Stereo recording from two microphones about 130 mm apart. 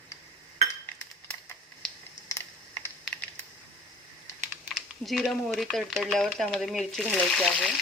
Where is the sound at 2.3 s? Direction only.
25° left (ahead or behind).